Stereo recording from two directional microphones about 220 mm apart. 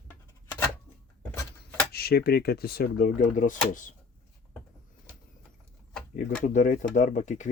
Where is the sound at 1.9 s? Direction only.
45° left (ahead or behind).